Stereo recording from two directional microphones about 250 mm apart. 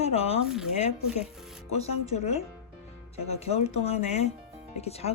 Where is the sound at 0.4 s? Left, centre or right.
Centre.